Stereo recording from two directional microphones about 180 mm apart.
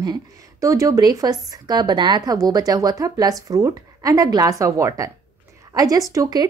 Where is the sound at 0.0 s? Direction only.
20° right (ahead or behind).